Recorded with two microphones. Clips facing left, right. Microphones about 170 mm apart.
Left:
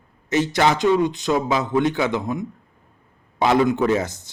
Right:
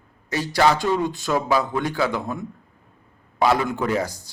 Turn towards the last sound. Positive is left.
turn(degrees=20)  # may be behind; listen again after turning